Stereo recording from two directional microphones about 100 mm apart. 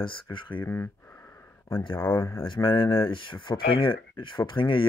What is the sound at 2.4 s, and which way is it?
Speech, 55° left (ahead or behind).